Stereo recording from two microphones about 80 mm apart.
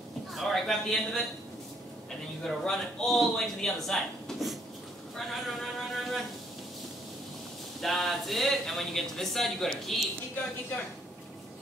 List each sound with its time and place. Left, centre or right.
0.3 s a man's voice: centre
2.4 s speech: centre
7.8 s speech: centre